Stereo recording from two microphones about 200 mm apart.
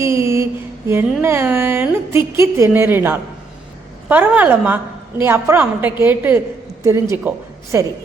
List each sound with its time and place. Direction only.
0.0 s mantra: 15° right (ahead or behind)
1.2 s a woman's voice: 10° right (ahead or behind)